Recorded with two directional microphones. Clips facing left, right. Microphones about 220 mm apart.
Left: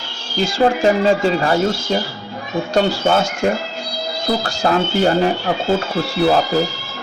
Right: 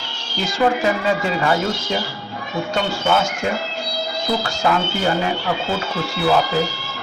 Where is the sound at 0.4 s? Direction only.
30° left (ahead or behind).